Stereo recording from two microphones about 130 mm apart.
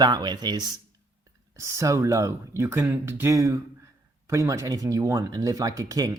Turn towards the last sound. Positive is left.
turn(degrees=-25)  # may be behind; listen again after turning